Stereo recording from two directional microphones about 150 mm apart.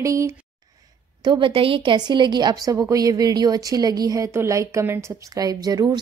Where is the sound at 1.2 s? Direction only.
35° right (ahead or behind).